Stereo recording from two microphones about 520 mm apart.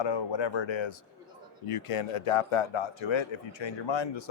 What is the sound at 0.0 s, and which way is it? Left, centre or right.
Speech, left.